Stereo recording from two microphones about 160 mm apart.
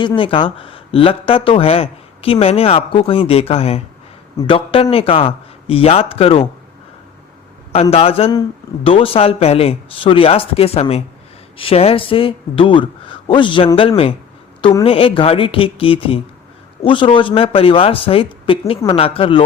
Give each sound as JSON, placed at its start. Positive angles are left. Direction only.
{"t": 0.2, "sound": "speech", "side_deg": 35}
{"t": 7.7, "sound": "speech", "side_deg": 40}
{"t": 14.6, "sound": "a woman's voice", "side_deg": 25}
{"t": 14.8, "sound": "speech", "side_deg": 35}